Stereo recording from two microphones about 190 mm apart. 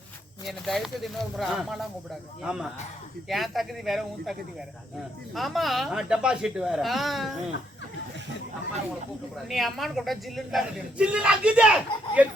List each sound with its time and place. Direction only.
0.4 s a man's voice: centre (ahead or behind)
9.5 s a man's voice: centre (ahead or behind)